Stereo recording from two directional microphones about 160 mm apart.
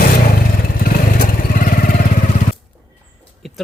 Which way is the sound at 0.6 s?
65° left (ahead or behind).